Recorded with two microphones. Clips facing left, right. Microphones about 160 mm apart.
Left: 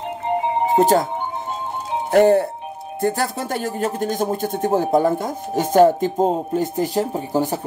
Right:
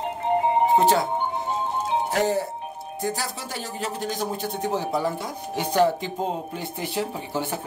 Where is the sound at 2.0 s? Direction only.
55° left (ahead or behind).